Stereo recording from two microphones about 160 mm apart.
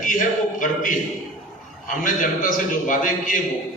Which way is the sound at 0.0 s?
55° left (ahead or behind).